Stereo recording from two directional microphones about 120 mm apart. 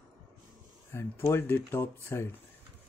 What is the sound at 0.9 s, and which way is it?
Speech, 20° left (ahead or behind).